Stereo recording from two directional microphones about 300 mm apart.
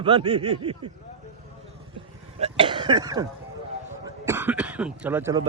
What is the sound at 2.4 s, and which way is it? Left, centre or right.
Speech, centre.